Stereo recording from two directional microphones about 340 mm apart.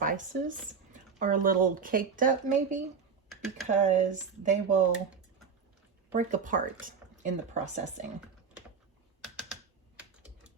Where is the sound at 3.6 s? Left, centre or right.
Right.